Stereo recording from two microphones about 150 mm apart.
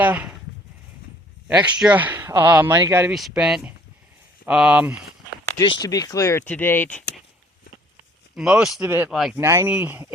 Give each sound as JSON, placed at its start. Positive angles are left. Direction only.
{"t": 0.0, "sound": "speech", "side_deg": -10}
{"t": 1.5, "sound": "speech", "side_deg": -5}
{"t": 3.1, "sound": "speech", "side_deg": 0}
{"t": 5.5, "sound": "speech", "side_deg": 25}
{"t": 8.4, "sound": "speech", "side_deg": -5}
{"t": 9.4, "sound": "speech", "side_deg": -15}